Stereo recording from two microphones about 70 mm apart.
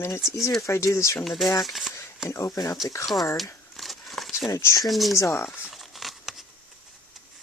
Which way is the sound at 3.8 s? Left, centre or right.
Centre.